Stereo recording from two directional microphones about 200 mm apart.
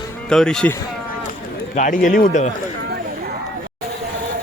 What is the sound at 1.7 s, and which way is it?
Speech, 40° left (ahead or behind).